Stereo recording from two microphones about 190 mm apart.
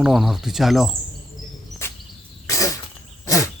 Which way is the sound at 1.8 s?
15° left (ahead or behind).